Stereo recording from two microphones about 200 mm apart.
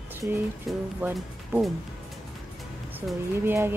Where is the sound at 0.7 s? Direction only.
5° right (ahead or behind).